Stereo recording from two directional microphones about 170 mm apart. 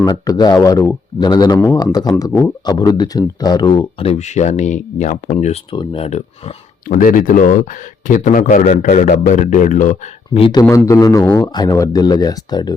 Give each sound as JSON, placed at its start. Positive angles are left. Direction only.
{"t": 0.1, "sound": "speech", "side_deg": 25}
{"t": 5.7, "sound": "speech", "side_deg": 30}
{"t": 6.8, "sound": "speech", "side_deg": 55}
{"t": 10.4, "sound": "speech", "side_deg": 20}